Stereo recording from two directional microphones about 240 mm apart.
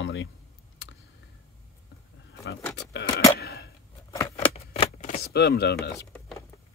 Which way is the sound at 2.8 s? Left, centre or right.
Left.